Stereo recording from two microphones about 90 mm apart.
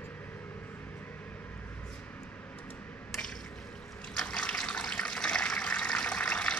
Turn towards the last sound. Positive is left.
turn(degrees=10)  # may be behind; listen again after turning